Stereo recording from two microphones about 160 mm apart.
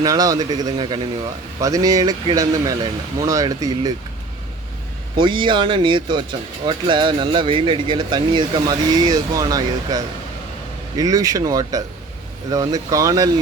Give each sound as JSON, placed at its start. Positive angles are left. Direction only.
{"t": 0.0, "sound": "speech", "side_deg": -20}
{"t": 5.1, "sound": "speech", "side_deg": -30}